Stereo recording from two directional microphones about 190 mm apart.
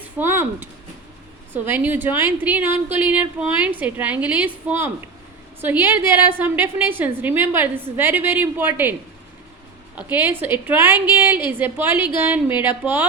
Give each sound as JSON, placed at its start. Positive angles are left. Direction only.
{"t": 0.2, "sound": "a woman's voice", "side_deg": -10}
{"t": 10.0, "sound": "a woman's voice", "side_deg": -10}